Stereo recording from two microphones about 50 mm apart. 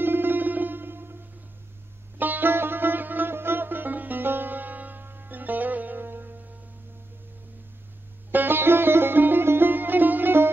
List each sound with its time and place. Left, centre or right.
0.0 s music: right
2.1 s sitar: right
8.3 s music: right